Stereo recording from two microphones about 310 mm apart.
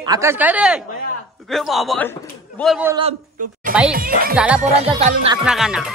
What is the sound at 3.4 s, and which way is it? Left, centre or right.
Speech, right.